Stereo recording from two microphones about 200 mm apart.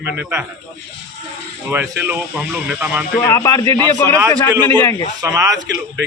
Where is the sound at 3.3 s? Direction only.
15° left (ahead or behind).